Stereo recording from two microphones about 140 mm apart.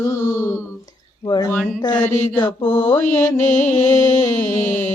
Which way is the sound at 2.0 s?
10° left (ahead or behind).